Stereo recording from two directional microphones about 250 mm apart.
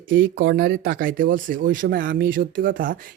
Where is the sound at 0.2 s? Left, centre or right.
Right.